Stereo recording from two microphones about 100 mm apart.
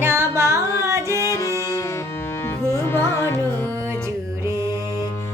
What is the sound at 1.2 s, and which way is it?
Music, 30° left (ahead or behind).